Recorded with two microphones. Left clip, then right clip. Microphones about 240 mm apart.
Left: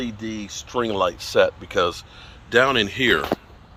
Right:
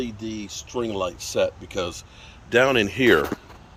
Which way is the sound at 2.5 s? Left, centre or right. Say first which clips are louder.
Left 1 dB; centre.